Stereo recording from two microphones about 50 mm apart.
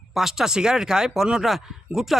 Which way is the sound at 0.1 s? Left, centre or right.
Centre.